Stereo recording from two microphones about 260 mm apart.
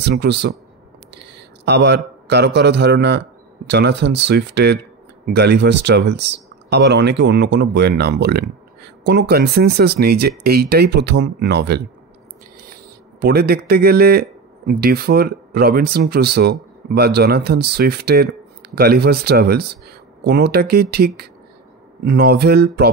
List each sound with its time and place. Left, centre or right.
0.0 s speech: right
1.1 s a sound: right
2.2 s speech: right
13.2 s speech: right